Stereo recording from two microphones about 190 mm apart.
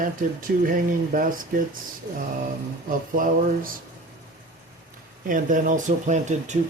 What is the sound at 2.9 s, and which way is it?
Speech, 45° right (ahead or behind).